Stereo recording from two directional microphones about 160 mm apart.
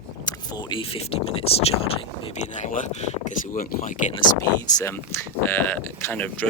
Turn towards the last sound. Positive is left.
turn(degrees=10)  # may be behind; listen again after turning